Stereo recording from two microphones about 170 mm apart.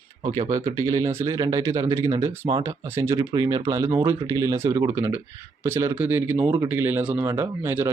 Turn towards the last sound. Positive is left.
turn(degrees=-15)  # may be behind; listen again after turning